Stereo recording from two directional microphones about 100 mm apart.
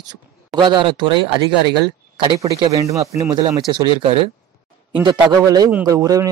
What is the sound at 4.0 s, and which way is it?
A man's voice, 60° right (ahead or behind).